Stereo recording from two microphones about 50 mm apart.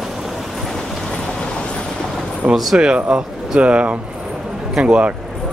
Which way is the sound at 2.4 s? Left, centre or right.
Right.